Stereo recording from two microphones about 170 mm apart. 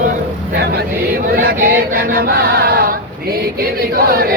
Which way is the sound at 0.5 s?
70° right (ahead or behind).